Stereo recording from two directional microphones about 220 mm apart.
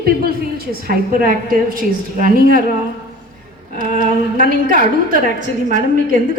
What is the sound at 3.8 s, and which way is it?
A woman's voice, 35° right (ahead or behind).